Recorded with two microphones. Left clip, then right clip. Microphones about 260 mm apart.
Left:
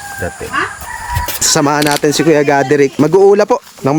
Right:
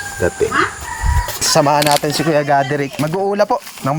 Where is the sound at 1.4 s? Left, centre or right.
Centre.